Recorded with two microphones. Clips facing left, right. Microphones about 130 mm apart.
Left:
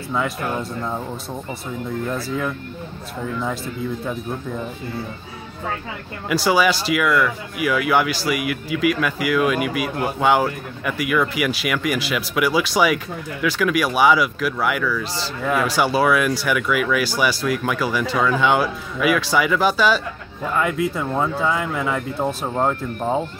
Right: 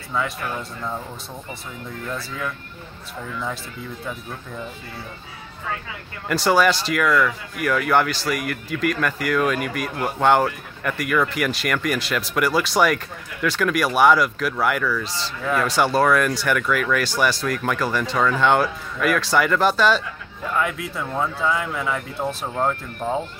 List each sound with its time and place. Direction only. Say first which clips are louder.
0.6 s speech: left 4 dB; 20° left (ahead or behind)
6.2 s speech: even; 5° left (ahead or behind)
22.5 s speech: left 3 dB; 20° left (ahead or behind)